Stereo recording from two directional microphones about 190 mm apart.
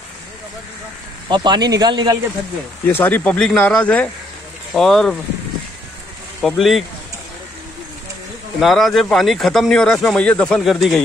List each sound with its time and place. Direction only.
1.3 s speech: 25° right (ahead or behind)
2.9 s speech: 10° left (ahead or behind)
6.4 s speech: centre (ahead or behind)
8.5 s speech: centre (ahead or behind)